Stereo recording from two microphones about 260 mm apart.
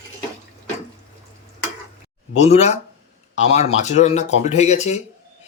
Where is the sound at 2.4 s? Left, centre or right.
Left.